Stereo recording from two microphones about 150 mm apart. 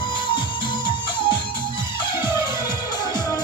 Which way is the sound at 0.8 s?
30° left (ahead or behind).